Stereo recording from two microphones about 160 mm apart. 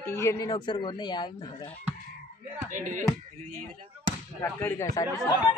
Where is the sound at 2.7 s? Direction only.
55° right (ahead or behind).